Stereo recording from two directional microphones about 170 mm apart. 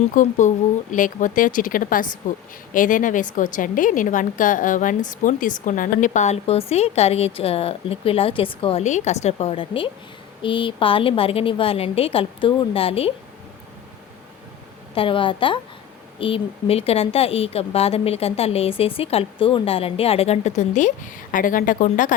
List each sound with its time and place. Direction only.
0.1 s a woman's voice: 50° left (ahead or behind); by 13.1 s 35° left (ahead or behind)
14.9 s a woman's voice: 30° left (ahead or behind); by 22.1 s 50° left (ahead or behind)